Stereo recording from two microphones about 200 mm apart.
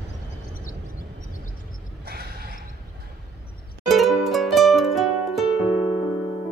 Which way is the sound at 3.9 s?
Centre (ahead or behind).